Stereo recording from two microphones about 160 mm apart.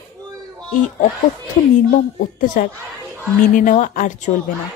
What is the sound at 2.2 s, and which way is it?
A woman's voice, 65° left (ahead or behind).